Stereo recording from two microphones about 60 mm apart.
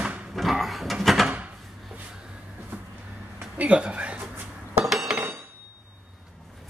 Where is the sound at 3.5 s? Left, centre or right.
Right.